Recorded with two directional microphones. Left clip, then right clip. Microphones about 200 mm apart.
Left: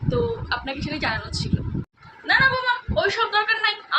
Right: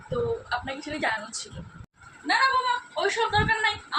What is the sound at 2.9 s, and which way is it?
A man's voice, 10° left (ahead or behind).